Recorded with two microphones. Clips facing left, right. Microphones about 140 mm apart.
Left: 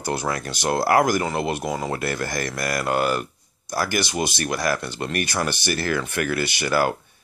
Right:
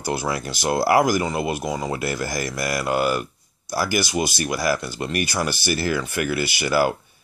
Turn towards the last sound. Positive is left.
turn(degrees=-10)  # may be behind; listen again after turning